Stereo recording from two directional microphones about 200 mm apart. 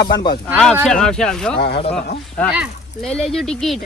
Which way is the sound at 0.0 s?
20° left (ahead or behind).